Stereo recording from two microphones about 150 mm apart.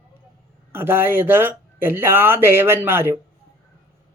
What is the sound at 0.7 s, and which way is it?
Speech, 15° right (ahead or behind).